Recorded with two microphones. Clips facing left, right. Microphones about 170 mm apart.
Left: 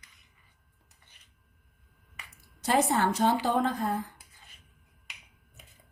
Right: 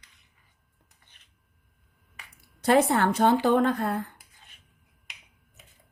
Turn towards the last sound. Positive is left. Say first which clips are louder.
# right 5 dB
turn(degrees=-65)  # may be behind; listen again after turning